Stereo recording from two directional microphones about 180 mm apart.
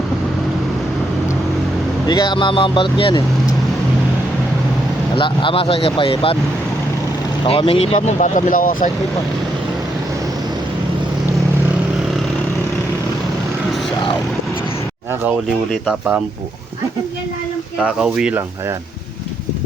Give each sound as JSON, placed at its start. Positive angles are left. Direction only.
{"t": 2.0, "sound": "speech", "side_deg": 25}
{"t": 5.1, "sound": "speech", "side_deg": 30}
{"t": 7.4, "sound": "speech", "side_deg": 30}
{"t": 15.9, "sound": "speech", "side_deg": -5}
{"t": 17.7, "sound": "speech", "side_deg": -5}